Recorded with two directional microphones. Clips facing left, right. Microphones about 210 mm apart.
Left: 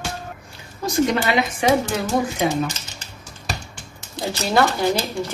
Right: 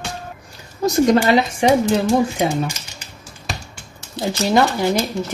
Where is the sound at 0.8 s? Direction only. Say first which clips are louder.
Right 5 dB; 40° right (ahead or behind).